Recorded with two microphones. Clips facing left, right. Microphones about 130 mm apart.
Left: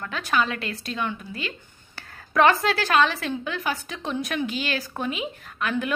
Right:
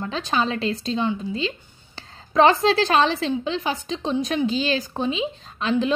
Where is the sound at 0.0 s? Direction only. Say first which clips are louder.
Right 2 dB; 25° right (ahead or behind).